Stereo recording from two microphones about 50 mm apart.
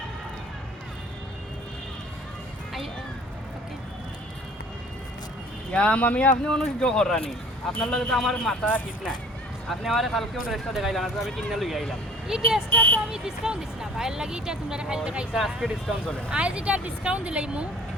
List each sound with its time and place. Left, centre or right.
5.7 s speech: left
6.4 s speech: centre
8.6 s speech: left
9.6 s speech: centre
12.3 s speech: centre
12.7 s speech: left
13.1 s speech: centre
15.4 s speech: centre
16.3 s speech: right